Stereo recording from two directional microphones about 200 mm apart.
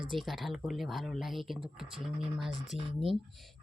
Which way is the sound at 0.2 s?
Centre (ahead or behind).